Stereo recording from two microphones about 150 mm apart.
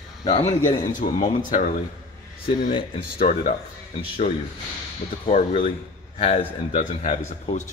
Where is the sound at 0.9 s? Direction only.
60° left (ahead or behind).